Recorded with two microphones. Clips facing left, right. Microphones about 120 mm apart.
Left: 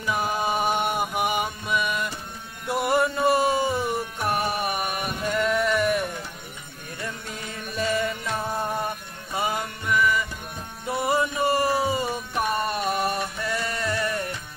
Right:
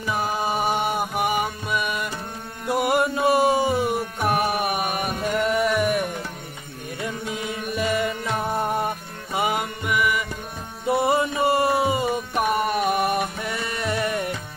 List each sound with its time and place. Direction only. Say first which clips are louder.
0.1 s music: even; centre (ahead or behind)
7.4 s music: right 1 dB; 10° right (ahead or behind)